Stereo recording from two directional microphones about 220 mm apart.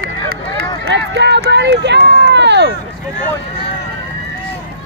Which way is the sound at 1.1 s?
50° right (ahead or behind).